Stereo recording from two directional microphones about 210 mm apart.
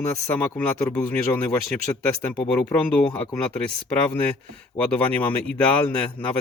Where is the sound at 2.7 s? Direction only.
5° left (ahead or behind).